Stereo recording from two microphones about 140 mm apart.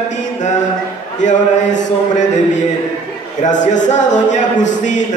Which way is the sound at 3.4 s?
60° left (ahead or behind).